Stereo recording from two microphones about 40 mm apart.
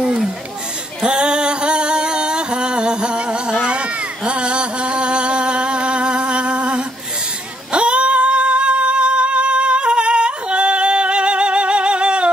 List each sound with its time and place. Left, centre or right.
1.0 s music: right
7.7 s singing: right